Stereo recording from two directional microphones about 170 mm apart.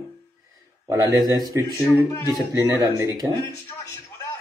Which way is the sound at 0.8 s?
15° right (ahead or behind).